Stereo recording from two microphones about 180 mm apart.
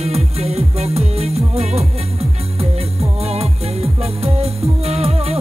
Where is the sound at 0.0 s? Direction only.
35° right (ahead or behind).